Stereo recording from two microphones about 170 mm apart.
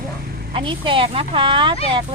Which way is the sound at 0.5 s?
30° right (ahead or behind).